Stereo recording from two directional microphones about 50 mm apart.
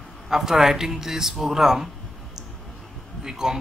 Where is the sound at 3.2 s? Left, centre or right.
Centre.